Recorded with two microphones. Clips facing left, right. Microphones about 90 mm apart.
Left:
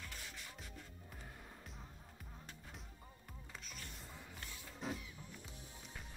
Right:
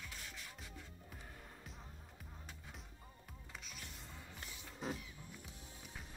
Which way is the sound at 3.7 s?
Centre (ahead or behind).